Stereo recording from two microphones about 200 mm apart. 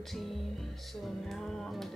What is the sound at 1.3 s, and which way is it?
Speech, centre (ahead or behind).